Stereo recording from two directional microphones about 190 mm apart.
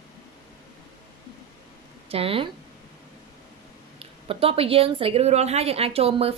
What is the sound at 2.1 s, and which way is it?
Speech, 30° right (ahead or behind).